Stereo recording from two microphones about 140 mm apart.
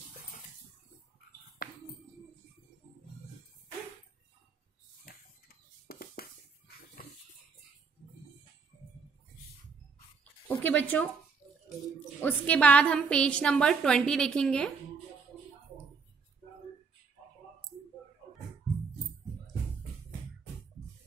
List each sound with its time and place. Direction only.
1.6 s music: 90° left
5.1 s a sound: 90° left
10.5 s a woman's voice: 10° left (ahead or behind)
12.2 s a woman's voice: 10° left (ahead or behind)